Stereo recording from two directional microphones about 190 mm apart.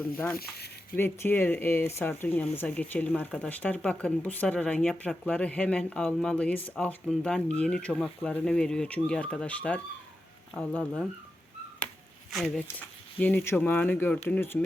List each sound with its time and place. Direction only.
0.3 s speech: 55° left (ahead or behind)
0.9 s speech: 10° left (ahead or behind)
12.3 s speech: centre (ahead or behind)